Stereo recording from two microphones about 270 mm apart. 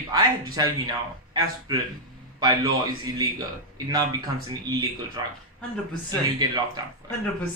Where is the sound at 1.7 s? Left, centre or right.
Centre.